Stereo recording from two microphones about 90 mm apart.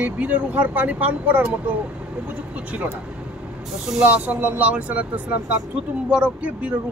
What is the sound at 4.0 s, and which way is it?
Speech, 20° right (ahead or behind).